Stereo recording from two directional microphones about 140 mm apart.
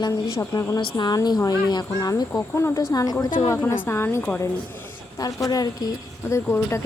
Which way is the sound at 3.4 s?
15° left (ahead or behind).